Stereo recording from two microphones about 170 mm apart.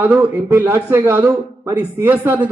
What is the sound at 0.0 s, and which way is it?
A man's voice, 15° right (ahead or behind).